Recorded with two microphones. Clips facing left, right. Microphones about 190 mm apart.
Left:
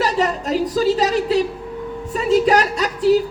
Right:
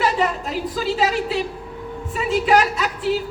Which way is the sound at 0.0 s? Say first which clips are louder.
Left 1 dB; 40° left (ahead or behind).